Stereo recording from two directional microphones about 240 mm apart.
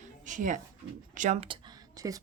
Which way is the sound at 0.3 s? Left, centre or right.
Right.